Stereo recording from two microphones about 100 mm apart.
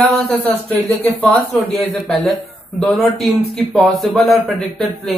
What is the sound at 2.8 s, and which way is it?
Speech, centre (ahead or behind).